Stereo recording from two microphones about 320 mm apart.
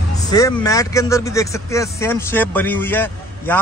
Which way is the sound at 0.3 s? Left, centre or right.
Centre.